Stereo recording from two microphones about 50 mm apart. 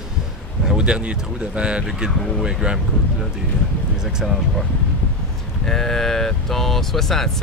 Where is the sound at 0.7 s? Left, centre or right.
Centre.